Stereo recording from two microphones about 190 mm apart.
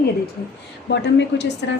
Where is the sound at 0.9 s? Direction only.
65° left (ahead or behind).